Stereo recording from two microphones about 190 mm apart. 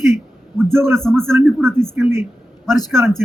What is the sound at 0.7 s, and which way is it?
Speech, 15° right (ahead or behind).